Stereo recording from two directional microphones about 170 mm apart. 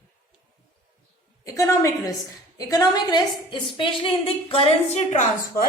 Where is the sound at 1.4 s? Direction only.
15° left (ahead or behind).